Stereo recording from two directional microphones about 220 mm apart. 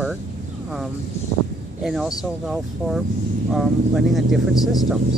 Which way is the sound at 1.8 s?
Centre (ahead or behind).